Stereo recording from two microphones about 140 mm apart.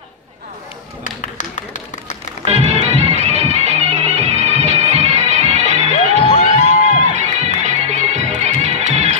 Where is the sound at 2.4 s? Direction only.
50° right (ahead or behind).